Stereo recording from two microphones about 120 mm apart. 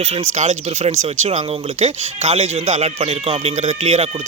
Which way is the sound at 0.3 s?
80° right.